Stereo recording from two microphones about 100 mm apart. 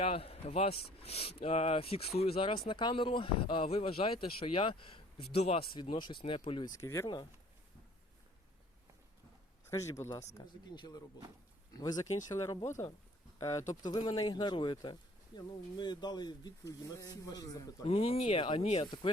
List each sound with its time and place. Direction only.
0.0 s speech: 75° left (ahead or behind)
5.7 s speech: 55° left (ahead or behind)
6.7 s speech: 30° left (ahead or behind)
9.6 s speech: 30° left (ahead or behind)
10.4 s speech: 45° left (ahead or behind)
13.8 s speech: 45° left (ahead or behind)
17.8 s speech: 75° left (ahead or behind)